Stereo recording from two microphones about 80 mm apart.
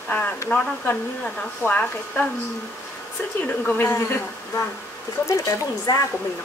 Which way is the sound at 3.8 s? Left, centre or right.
Left.